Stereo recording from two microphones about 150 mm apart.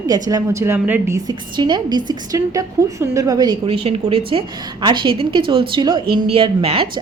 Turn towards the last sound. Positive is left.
turn(degrees=-35)  # may be behind; listen again after turning